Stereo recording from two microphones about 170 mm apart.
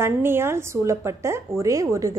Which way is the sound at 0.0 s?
15° right (ahead or behind).